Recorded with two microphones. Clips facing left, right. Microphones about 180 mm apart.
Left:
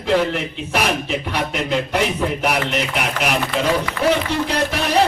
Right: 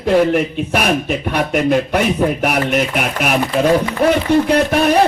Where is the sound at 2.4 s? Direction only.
50° right (ahead or behind).